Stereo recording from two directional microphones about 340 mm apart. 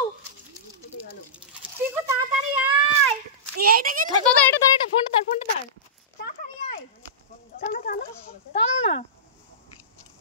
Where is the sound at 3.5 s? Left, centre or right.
Right.